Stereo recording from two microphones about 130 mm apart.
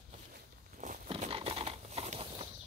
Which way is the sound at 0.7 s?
75° right (ahead or behind).